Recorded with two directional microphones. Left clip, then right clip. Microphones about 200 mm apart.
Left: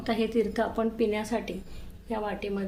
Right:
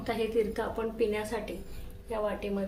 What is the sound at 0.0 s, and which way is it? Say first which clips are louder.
A woman's voice: left 2 dB; 55° left (ahead or behind).